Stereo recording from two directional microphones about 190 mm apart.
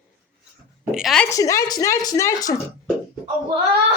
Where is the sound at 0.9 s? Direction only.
Centre (ahead or behind).